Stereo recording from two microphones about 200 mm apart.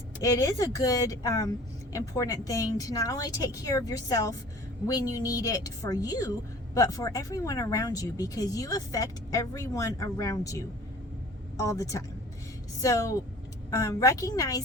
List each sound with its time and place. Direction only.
0.2 s speech: 15° left (ahead or behind)